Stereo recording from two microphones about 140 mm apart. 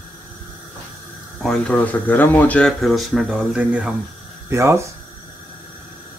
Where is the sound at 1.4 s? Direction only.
5° left (ahead or behind).